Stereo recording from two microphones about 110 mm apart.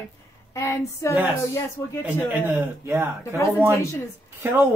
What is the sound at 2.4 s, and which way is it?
Speech, 25° right (ahead or behind).